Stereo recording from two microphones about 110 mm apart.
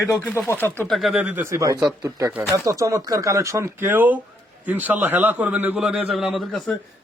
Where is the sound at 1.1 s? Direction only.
15° right (ahead or behind).